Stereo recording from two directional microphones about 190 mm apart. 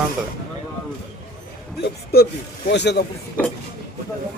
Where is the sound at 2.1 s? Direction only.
55° left (ahead or behind).